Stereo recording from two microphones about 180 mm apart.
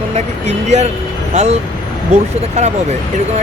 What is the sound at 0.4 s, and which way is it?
Speech, 40° right (ahead or behind).